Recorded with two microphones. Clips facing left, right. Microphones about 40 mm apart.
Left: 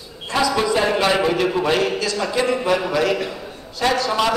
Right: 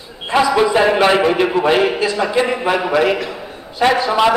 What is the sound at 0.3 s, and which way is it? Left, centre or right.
A man's voice, right.